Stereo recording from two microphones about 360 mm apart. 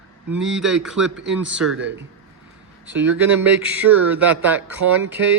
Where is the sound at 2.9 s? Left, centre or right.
Centre.